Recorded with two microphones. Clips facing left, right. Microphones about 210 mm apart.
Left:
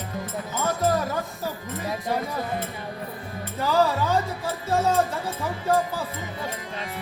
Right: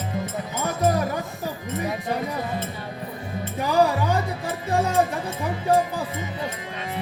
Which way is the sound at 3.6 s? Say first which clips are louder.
Right 1 dB; 15° right (ahead or behind).